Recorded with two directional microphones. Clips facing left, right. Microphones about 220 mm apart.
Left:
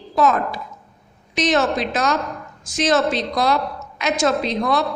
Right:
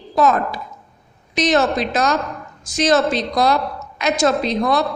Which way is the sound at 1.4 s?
40° right (ahead or behind).